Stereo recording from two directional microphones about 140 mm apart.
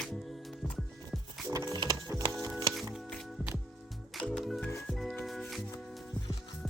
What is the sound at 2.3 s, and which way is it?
Music, centre (ahead or behind).